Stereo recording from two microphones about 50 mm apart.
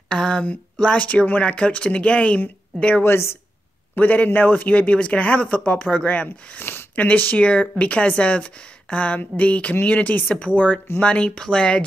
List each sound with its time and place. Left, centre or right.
0.1 s a sound: left
1.0 s speech: left
3.0 s a woman's voice: left
3.9 s a man's voice: left
4.7 s speech: left
6.6 s a sound: left
7.0 s a man's voice: left